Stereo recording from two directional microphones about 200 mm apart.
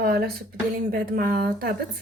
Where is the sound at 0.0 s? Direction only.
50° right (ahead or behind).